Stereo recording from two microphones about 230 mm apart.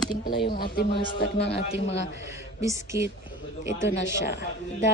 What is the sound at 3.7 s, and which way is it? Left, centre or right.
Speech, left.